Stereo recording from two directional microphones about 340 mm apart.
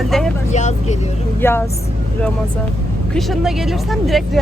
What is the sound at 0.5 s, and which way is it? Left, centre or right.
Speech, centre.